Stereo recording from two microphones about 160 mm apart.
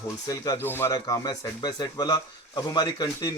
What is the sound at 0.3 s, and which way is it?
Speech, 20° left (ahead or behind).